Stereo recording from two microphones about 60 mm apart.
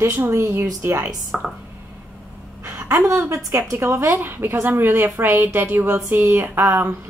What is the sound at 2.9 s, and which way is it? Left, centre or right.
A woman's voice, right.